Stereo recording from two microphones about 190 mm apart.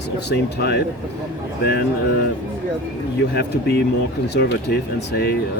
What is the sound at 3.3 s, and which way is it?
Speech, 60° left (ahead or behind).